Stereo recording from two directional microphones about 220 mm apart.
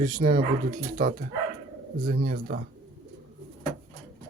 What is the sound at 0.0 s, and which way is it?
Speech, 35° right (ahead or behind).